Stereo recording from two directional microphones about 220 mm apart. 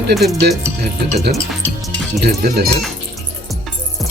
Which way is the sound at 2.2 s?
45° right (ahead or behind).